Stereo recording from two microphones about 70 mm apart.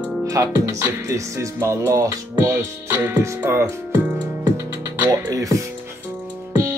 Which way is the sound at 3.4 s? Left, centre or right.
Right.